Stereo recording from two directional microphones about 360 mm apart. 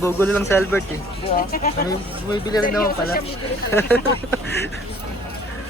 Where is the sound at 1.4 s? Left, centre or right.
Left.